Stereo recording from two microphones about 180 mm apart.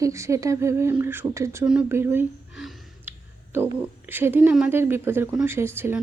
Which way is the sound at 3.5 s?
10° right (ahead or behind).